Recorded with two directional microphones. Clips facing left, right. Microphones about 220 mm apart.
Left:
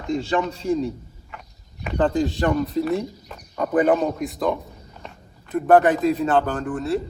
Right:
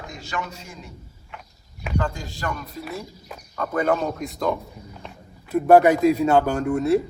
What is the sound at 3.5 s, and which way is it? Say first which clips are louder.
Speech: left 5 dB; 15° left (ahead or behind).